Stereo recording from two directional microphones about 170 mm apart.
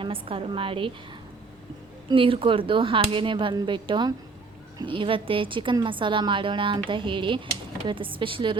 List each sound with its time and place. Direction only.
0.0 s speech: 30° right (ahead or behind)
2.0 s a woman's voice: 30° right (ahead or behind)